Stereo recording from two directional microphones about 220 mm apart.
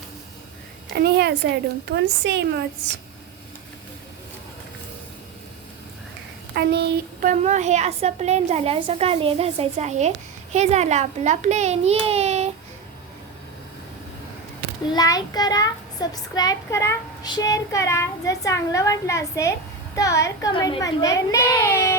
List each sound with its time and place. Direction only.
0.9 s a woman's voice: 45° right (ahead or behind)
6.5 s a woman's voice: 45° right (ahead or behind); by 12.5 s 30° right (ahead or behind)
14.9 s a child's voice: 15° left (ahead or behind)